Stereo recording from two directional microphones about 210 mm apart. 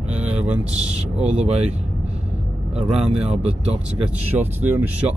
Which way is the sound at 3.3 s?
30° right (ahead or behind).